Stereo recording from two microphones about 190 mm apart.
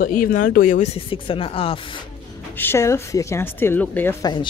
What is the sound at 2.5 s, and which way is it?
A woman's voice, 10° left (ahead or behind).